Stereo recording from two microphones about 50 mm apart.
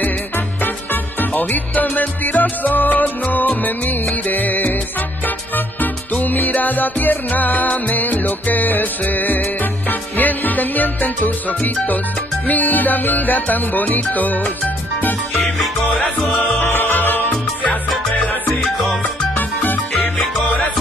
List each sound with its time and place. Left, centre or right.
1.3 s music: left
5.8 s music: left
15.9 s music: left
17.3 s salsa music: left
19.3 s music: left